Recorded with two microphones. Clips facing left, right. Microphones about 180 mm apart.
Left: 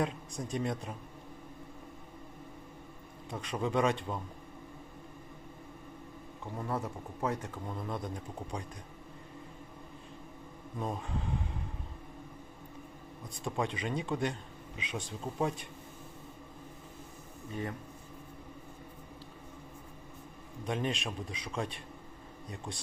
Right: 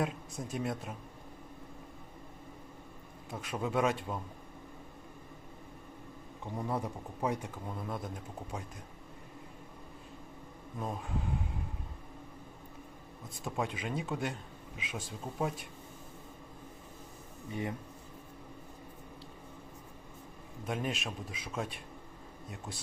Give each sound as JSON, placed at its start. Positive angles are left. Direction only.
{"t": 0.0, "sound": "speech", "side_deg": -5}
{"t": 3.2, "sound": "speech", "side_deg": -5}
{"t": 6.6, "sound": "speech", "side_deg": -15}
{"t": 10.8, "sound": "speech", "side_deg": 0}
{"t": 13.3, "sound": "speech", "side_deg": 0}
{"t": 17.5, "sound": "a man's voice", "side_deg": -20}
{"t": 20.7, "sound": "speech", "side_deg": -5}